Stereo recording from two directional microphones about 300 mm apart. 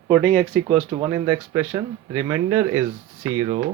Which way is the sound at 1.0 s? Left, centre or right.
Centre.